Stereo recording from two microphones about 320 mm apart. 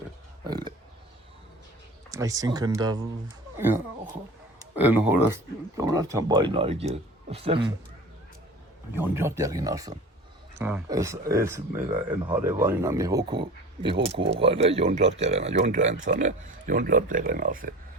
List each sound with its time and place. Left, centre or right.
0.4 s oink: centre
2.0 s speech: centre
9.0 s speech: centre; by 17.7 s right